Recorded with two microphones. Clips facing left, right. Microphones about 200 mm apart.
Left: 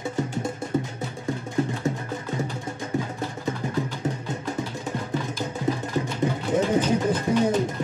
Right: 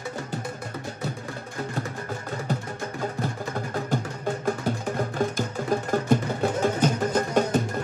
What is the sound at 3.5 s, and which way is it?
Music, 50° right (ahead or behind).